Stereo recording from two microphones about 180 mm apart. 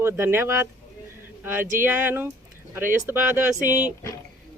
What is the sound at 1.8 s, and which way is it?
Speech, 10° right (ahead or behind).